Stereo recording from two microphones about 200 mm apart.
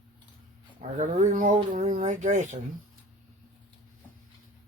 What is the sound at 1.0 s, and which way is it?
Speech, 40° right (ahead or behind).